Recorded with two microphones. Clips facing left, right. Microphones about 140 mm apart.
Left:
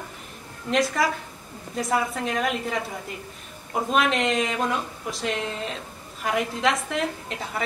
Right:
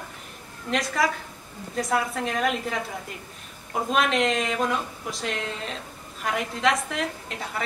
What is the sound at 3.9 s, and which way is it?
A woman's voice, centre (ahead or behind).